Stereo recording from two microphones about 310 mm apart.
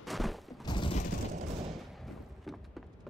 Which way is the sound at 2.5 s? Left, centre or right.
Centre.